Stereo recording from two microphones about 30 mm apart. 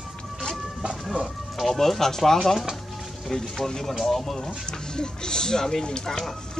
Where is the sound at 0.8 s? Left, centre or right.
Right.